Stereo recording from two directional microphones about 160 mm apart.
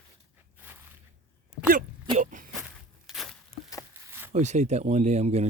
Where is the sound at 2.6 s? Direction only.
Centre (ahead or behind).